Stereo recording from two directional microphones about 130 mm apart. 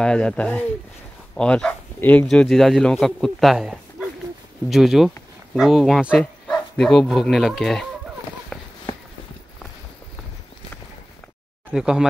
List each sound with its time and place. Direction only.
0.0 s speech: 5° left (ahead or behind)
2.2 s a man's voice: centre (ahead or behind)
8.5 s run: 5° left (ahead or behind)
11.7 s a man's voice: 5° right (ahead or behind)